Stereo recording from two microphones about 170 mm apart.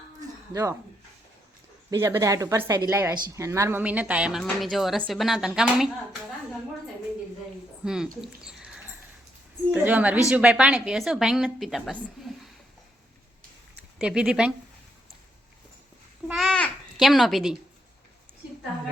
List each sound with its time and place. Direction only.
0.5 s speech: 20° right (ahead or behind)
1.9 s a woman's voice: 20° right (ahead or behind); by 5.9 s 5° right (ahead or behind)
7.9 s a woman's voice: 5° right (ahead or behind)
8.2 s a sound: 5° right (ahead or behind)
9.7 s a woman's voice: 10° right (ahead or behind)
14.0 s a woman's voice: 5° right (ahead or behind)
16.3 s a woman's voice: centre (ahead or behind)